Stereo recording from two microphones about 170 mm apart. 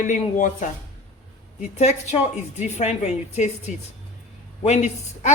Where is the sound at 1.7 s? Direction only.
40° left (ahead or behind).